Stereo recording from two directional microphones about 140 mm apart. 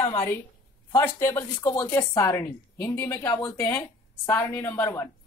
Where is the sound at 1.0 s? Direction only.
20° left (ahead or behind).